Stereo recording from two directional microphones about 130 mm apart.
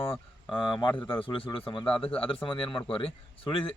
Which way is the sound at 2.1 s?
45° left (ahead or behind).